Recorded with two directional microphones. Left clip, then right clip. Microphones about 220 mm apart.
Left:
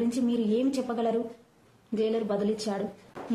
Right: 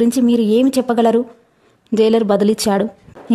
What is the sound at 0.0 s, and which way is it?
Speech, 50° right (ahead or behind).